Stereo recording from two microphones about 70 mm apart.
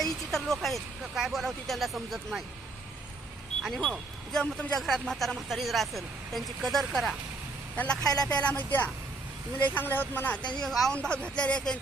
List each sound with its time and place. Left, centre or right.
0.0 s speech: centre
3.6 s speech: centre
8.3 s speech: centre
10.7 s speech: centre
10.9 s speech: centre